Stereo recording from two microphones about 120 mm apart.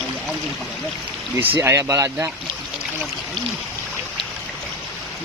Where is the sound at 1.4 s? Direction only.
20° right (ahead or behind).